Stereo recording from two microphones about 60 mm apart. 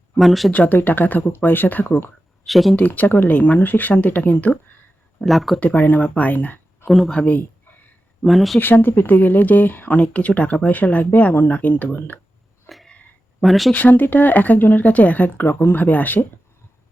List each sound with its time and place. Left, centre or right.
0.2 s speech: centre
0.5 s speech: left
2.5 s speech: centre
2.7 s speech: left
5.2 s speech: centre
5.5 s speech: left
6.8 s speech: centre
7.1 s speech: left
8.2 s speech: centre
8.5 s speech: left
12.6 s a sound: centre
13.4 s speech: centre
13.7 s speech: left